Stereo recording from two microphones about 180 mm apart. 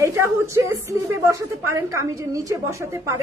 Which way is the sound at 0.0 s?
15° right (ahead or behind).